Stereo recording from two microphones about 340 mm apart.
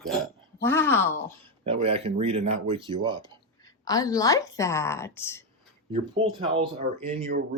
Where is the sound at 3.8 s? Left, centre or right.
Centre.